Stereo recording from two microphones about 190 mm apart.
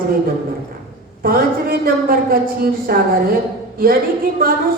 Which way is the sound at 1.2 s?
50° right (ahead or behind).